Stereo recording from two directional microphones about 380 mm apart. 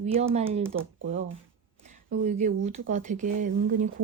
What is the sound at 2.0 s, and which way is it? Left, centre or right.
Speech, centre.